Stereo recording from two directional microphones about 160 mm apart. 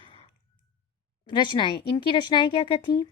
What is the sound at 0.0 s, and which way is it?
Clicking, 35° left (ahead or behind).